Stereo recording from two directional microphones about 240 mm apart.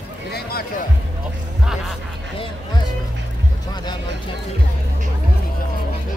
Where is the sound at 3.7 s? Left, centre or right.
Centre.